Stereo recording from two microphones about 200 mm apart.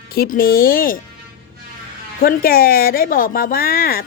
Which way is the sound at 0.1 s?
50° left (ahead or behind).